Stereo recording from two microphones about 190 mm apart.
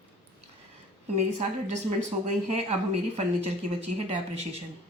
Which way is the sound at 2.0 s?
40° right (ahead or behind).